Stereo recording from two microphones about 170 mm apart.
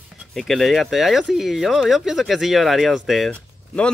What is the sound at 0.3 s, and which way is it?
Speech, centre (ahead or behind).